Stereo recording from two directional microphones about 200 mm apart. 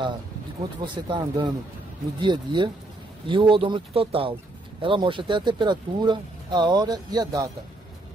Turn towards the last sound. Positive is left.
turn(degrees=-20)  # may be behind; listen again after turning